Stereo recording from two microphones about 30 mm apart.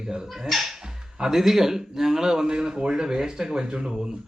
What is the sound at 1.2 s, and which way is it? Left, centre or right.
Speech, centre.